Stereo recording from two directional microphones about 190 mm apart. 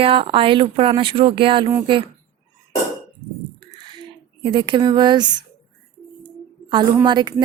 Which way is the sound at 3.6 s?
25° right (ahead or behind).